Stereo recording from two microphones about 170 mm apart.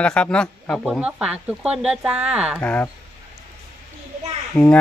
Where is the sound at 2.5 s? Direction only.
10° left (ahead or behind).